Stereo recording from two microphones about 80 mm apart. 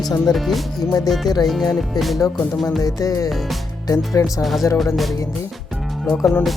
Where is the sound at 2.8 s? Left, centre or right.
Left.